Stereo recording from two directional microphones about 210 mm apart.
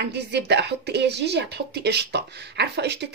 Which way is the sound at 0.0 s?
55° right (ahead or behind).